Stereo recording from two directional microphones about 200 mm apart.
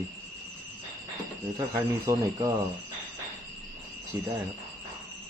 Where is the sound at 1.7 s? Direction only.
15° right (ahead or behind).